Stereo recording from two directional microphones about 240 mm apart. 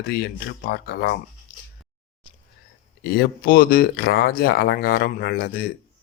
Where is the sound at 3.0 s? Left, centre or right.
Left.